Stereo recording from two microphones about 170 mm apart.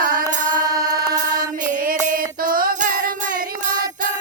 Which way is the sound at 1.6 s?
55° right (ahead or behind).